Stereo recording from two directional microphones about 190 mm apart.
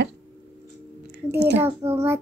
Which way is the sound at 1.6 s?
15° right (ahead or behind).